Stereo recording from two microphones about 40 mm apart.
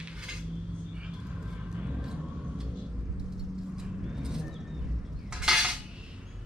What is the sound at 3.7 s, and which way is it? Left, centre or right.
Vehicle, centre.